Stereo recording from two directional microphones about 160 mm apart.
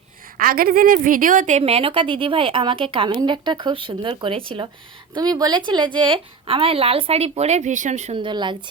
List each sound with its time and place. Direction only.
0.3 s a woman's voice: 65° right (ahead or behind); by 8.1 s 45° right (ahead or behind)
8.1 s speech: 30° right (ahead or behind)